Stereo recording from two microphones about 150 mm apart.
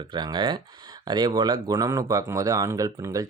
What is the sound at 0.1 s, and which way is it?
Speech, 30° right (ahead or behind).